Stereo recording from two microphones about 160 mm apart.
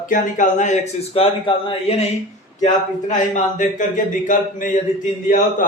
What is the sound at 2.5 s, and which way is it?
Speech, 50° left (ahead or behind).